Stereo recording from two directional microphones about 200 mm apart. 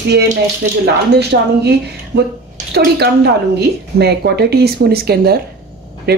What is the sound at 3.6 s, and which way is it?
Speech, 55° right (ahead or behind).